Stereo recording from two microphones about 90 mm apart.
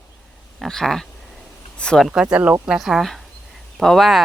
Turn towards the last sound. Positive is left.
turn(degrees=0)  # may be behind; listen again after turning